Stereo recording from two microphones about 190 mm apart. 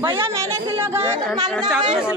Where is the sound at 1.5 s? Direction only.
Centre (ahead or behind).